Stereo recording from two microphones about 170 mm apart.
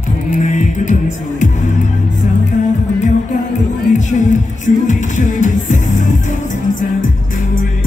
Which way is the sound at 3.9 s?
45° left (ahead or behind).